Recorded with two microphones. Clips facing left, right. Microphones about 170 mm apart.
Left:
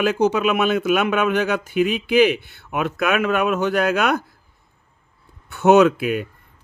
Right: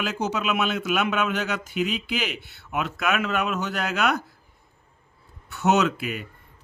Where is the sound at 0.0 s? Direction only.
55° left (ahead or behind).